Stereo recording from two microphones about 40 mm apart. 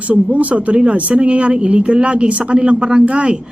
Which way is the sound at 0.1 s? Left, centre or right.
Right.